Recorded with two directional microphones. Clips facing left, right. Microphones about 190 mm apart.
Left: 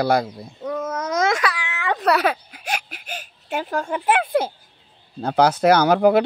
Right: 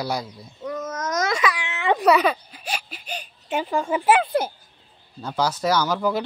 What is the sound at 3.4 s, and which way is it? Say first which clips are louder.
Speech: right 1 dB; centre (ahead or behind).